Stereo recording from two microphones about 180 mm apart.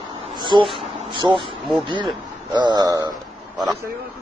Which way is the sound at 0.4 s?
25° right (ahead or behind).